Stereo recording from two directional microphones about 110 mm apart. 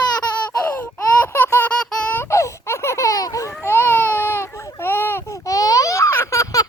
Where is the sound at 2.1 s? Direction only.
25° left (ahead or behind).